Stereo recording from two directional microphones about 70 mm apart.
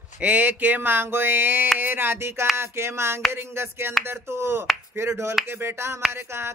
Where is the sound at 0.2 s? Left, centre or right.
Right.